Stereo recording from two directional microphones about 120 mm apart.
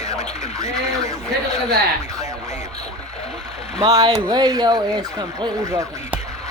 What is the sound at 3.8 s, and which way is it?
Speech, 30° right (ahead or behind).